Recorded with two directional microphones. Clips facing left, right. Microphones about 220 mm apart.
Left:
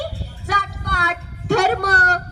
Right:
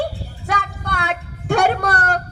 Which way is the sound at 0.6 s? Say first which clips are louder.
Right 1 dB; 50° right (ahead or behind).